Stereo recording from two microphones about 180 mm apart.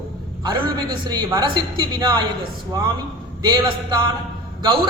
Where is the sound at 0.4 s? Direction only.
25° right (ahead or behind).